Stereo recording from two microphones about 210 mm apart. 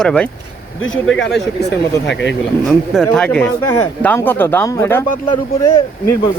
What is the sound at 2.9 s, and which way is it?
Speech, 5° left (ahead or behind).